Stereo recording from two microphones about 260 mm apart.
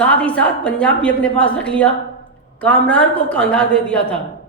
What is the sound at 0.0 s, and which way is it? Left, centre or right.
A woman's voice, centre.